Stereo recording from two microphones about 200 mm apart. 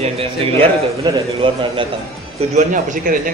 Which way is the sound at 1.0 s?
25° right (ahead or behind).